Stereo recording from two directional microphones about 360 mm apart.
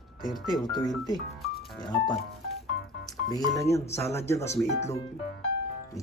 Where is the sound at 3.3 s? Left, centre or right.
Centre.